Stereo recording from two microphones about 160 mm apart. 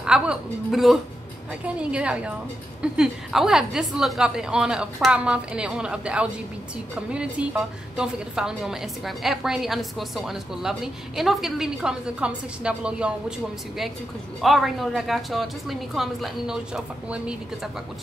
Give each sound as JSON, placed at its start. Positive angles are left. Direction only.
{"t": 0.0, "sound": "a woman's voice", "side_deg": -5}
{"t": 14.4, "sound": "a woman's voice", "side_deg": 0}